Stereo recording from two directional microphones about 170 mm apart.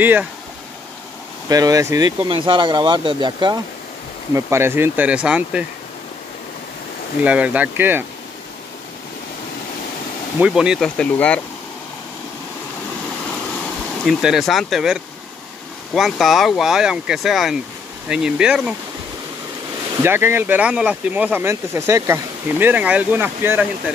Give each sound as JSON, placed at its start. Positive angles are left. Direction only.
{"t": 0.0, "sound": "speech", "side_deg": -10}
{"t": 1.5, "sound": "speech", "side_deg": -20}
{"t": 4.3, "sound": "speech", "side_deg": -15}
{"t": 7.2, "sound": "speech", "side_deg": -10}
{"t": 10.4, "sound": "speech", "side_deg": -5}
{"t": 14.0, "sound": "speech", "side_deg": 0}
{"t": 20.0, "sound": "speech", "side_deg": -15}